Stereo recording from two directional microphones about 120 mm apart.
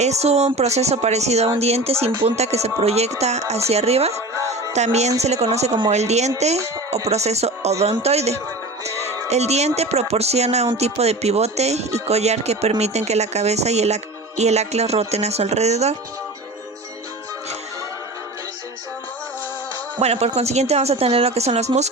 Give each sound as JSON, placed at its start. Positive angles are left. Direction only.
{"t": 0.0, "sound": "a woman's voice", "side_deg": -65}
{"t": 4.4, "sound": "music", "side_deg": -25}
{"t": 4.7, "sound": "a woman's voice", "side_deg": -70}
{"t": 20.0, "sound": "speech", "side_deg": -60}